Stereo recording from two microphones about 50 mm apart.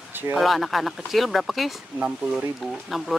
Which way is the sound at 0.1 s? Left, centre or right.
Right.